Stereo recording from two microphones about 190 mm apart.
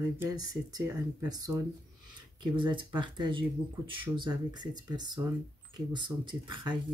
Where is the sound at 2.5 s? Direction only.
25° right (ahead or behind).